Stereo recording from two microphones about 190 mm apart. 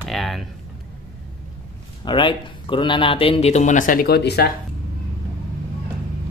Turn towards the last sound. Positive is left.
turn(degrees=60)  # may be behind; listen again after turning